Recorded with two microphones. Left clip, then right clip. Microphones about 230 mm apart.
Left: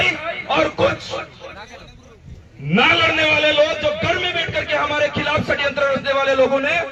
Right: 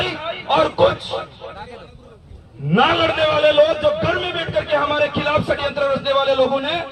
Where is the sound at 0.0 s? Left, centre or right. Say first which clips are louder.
Left 4 dB; centre.